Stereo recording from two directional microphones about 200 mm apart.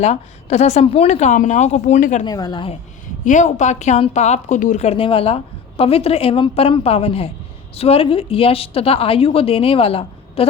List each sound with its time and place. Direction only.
0.0 s speech: 35° left (ahead or behind)
2.2 s a woman's voice: 20° left (ahead or behind)
3.2 s a woman's voice: 40° left (ahead or behind)